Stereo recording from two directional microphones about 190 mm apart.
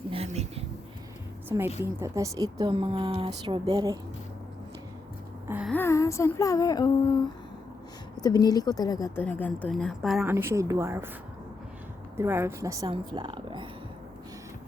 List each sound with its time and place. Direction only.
0.1 s a sound: 30° right (ahead or behind)
1.5 s a woman's voice: 10° right (ahead or behind)
5.5 s a sound: 5° right (ahead or behind)
5.7 s a woman's voice: 15° left (ahead or behind)
10.2 s a woman's voice: 15° right (ahead or behind)
12.1 s a woman's voice: 15° right (ahead or behind)